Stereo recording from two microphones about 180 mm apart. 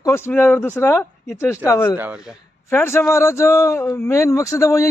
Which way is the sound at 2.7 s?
10° left (ahead or behind).